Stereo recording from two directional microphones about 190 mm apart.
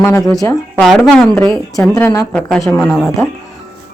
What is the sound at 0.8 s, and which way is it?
Speech, centre (ahead or behind).